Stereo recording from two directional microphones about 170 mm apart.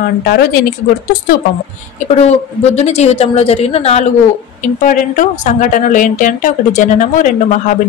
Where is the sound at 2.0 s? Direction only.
40° left (ahead or behind).